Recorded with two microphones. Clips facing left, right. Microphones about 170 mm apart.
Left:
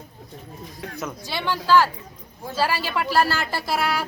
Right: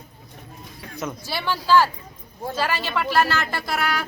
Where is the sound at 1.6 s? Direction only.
15° right (ahead or behind).